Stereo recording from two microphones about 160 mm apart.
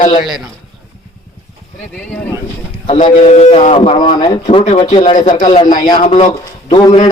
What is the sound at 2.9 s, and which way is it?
A man's voice, 35° left (ahead or behind).